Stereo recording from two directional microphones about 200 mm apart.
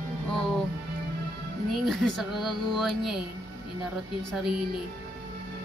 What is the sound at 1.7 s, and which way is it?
Speech, centre (ahead or behind).